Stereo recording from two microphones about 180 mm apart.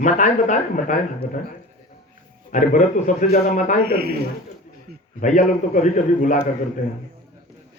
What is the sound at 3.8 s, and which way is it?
Speech, 60° right (ahead or behind).